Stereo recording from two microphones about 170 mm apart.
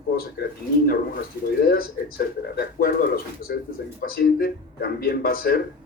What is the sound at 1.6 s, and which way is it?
Speech, 60° left (ahead or behind).